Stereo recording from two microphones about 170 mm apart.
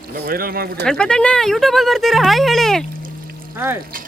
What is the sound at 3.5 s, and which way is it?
Speech, 10° right (ahead or behind).